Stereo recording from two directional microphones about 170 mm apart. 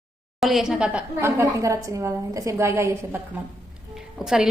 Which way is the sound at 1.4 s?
20° right (ahead or behind).